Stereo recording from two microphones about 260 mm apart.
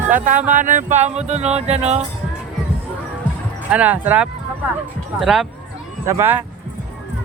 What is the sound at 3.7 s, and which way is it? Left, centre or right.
Speech, centre.